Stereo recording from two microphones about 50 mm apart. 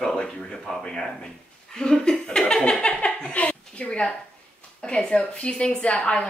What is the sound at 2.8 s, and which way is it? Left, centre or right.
Chuckle, left.